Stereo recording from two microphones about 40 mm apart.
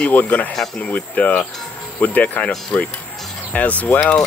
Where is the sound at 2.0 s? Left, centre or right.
Left.